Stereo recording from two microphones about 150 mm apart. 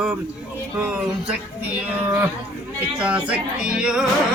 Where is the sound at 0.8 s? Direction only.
10° right (ahead or behind).